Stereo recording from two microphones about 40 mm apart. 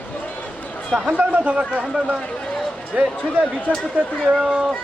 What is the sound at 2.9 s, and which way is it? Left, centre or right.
Speech, right.